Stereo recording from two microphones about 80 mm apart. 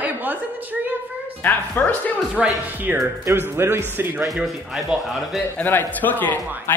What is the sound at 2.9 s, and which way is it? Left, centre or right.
Speech, right.